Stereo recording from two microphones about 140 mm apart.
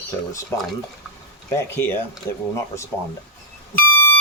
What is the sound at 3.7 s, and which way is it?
Beep, 15° left (ahead or behind).